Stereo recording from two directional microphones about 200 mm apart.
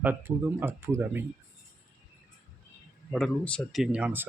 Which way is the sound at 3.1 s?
5° left (ahead or behind).